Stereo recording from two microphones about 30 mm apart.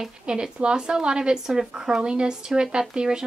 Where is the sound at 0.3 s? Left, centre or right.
Right.